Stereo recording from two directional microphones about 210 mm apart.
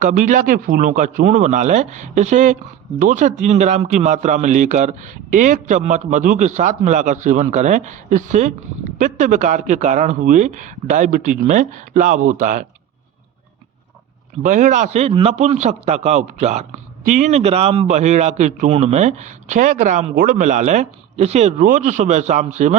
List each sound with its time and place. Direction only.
0.0 s a man's voice: 40° right (ahead or behind)
14.4 s a man's voice: 35° right (ahead or behind)